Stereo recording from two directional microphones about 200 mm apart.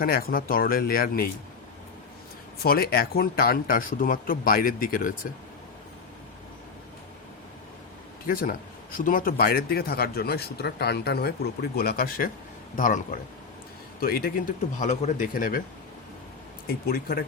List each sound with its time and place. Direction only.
0.0 s a man's voice: 50° left (ahead or behind)
2.6 s a man's voice: 50° left (ahead or behind)
8.3 s a man's voice: 45° left (ahead or behind)
14.0 s a man's voice: 50° left (ahead or behind)
16.8 s a man's voice: 45° left (ahead or behind)